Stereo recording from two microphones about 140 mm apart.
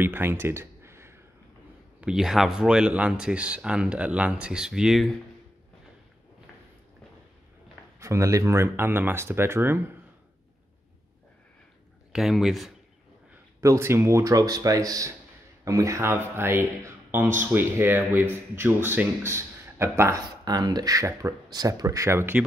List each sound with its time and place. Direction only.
0.0 s a sound: 15° right (ahead or behind)
2.0 s speech: 5° right (ahead or behind)
8.0 s speech: 20° right (ahead or behind)
12.1 s speech: centre (ahead or behind)
13.6 s speech: 20° right (ahead or behind)